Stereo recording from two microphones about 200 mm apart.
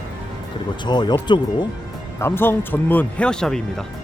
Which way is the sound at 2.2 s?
10° left (ahead or behind).